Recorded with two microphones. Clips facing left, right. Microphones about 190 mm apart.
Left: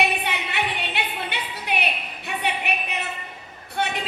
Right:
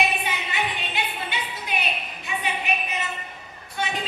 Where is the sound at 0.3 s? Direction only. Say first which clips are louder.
Left 1 dB; 65° left (ahead or behind).